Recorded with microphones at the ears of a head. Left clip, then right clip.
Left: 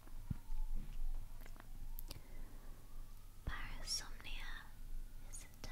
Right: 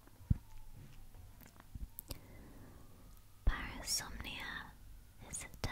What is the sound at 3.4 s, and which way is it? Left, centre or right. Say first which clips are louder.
Whispering: right 6 dB; right.